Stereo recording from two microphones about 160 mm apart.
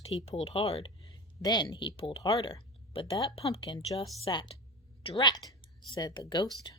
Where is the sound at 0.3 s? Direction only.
35° left (ahead or behind).